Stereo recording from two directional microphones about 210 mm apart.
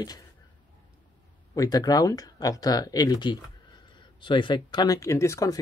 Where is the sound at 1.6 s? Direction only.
20° left (ahead or behind).